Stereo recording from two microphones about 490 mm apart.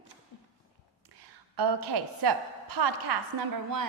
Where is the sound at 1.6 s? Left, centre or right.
Right.